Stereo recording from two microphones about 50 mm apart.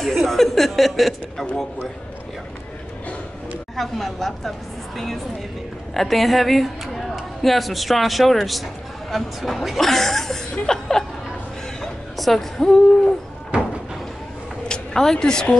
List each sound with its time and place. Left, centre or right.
0.0 s a woman's voice: centre
3.7 s a woman's voice: centre
11.8 s music: centre
13.5 s a sound: right
14.7 s speech: centre